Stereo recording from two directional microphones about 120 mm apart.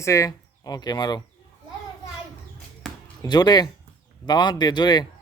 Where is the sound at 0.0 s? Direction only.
25° left (ahead or behind).